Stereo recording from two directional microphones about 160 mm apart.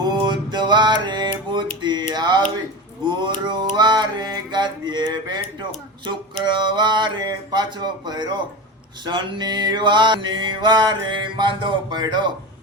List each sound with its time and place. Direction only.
0.0 s music: 25° right (ahead or behind)
1.8 s a sound: 30° right (ahead or behind)
3.0 s mantra: 30° right (ahead or behind)
6.4 s mantra: 30° right (ahead or behind)